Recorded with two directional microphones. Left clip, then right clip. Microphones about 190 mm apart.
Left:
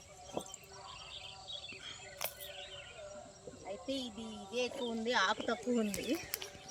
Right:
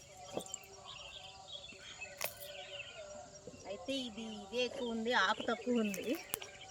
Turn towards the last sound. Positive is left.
turn(degrees=5)  # may be behind; listen again after turning